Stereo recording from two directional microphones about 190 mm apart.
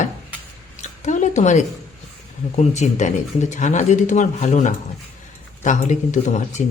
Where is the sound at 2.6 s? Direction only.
40° left (ahead or behind).